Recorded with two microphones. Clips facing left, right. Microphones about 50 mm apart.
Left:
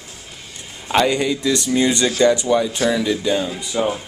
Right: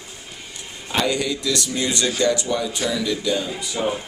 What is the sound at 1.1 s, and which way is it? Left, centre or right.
Speech, left.